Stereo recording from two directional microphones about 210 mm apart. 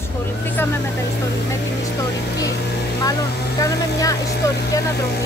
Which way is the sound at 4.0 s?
15° left (ahead or behind).